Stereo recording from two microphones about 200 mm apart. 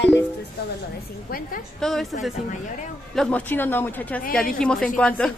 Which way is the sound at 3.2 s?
5° left (ahead or behind).